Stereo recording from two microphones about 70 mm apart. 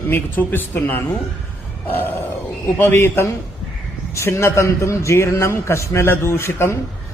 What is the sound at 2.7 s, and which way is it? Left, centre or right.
A man's voice, left.